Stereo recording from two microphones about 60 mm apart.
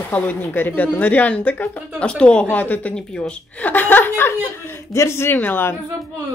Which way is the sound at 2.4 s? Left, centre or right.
Left.